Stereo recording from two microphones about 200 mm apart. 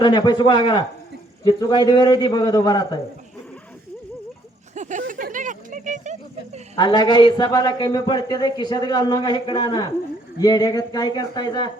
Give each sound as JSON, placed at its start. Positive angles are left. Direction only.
{"t": 0.0, "sound": "a man's voice", "side_deg": 20}
{"t": 4.7, "sound": "a sound", "side_deg": -35}
{"t": 6.7, "sound": "a man's voice", "side_deg": 20}